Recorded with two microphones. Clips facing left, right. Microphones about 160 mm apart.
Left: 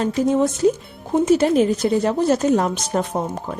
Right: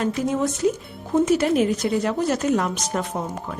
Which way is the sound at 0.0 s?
30° left (ahead or behind).